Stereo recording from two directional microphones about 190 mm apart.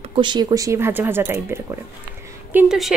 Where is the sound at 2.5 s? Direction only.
5° right (ahead or behind).